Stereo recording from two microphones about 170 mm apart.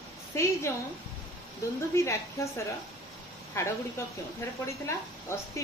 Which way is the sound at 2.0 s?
15° left (ahead or behind).